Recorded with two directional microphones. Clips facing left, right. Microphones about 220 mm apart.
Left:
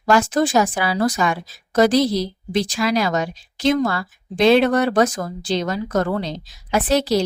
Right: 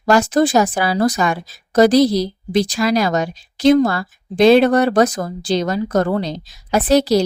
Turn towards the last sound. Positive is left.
turn(degrees=-40)  # may be behind; listen again after turning